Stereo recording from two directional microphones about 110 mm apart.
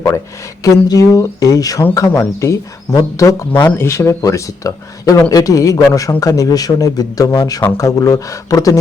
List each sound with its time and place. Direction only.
0.6 s speech: 30° left (ahead or behind)
3.5 s speech: 15° left (ahead or behind); by 8.8 s 30° left (ahead or behind)